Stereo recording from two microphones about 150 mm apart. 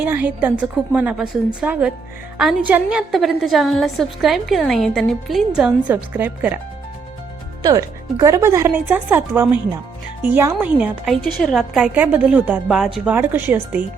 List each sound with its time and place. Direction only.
0.0 s a woman's voice: 10° right (ahead or behind)
7.6 s a woman's voice: 25° right (ahead or behind)